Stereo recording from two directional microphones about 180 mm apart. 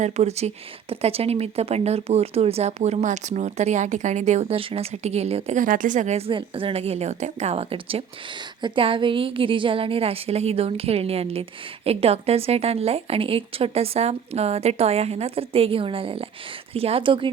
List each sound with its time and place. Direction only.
0.0 s speech: 35° right (ahead or behind)